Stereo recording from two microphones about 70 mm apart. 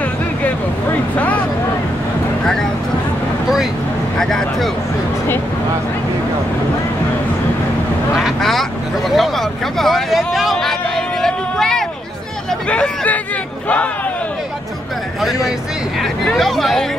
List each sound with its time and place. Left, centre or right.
1.1 s vehicle: left
2.4 s a sound: centre
4.2 s a sound: centre
8.2 s vehicle: centre
12.6 s hubbub: centre
16.3 s speech: centre